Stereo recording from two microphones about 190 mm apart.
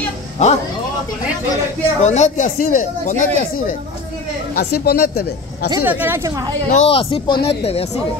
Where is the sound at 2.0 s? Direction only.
35° left (ahead or behind).